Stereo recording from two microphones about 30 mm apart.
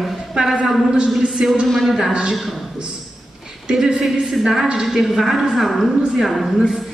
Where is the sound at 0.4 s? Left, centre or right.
Right.